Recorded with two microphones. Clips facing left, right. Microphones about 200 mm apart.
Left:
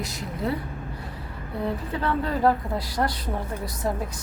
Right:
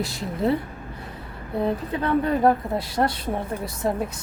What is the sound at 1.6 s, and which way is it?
A woman's voice, 20° right (ahead or behind).